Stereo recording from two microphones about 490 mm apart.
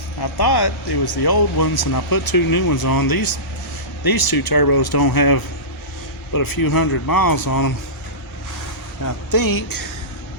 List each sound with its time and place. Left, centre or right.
0.2 s speech: left
9.0 s speech: left